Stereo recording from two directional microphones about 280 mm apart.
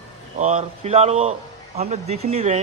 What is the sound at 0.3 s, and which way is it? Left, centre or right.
A man's voice, right.